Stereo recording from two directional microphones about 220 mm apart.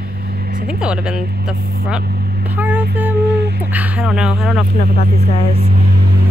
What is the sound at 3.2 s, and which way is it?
Humming, 45° right (ahead or behind).